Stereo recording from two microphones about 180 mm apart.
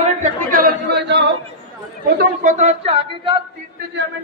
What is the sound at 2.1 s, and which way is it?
Speech, 40° right (ahead or behind).